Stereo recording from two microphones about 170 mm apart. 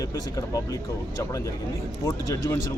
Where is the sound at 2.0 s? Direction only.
20° left (ahead or behind).